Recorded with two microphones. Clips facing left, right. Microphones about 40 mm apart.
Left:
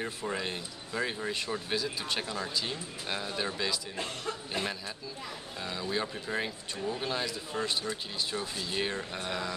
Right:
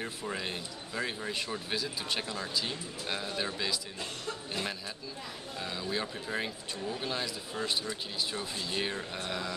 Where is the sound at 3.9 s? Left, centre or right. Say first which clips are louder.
Left 3 dB; left.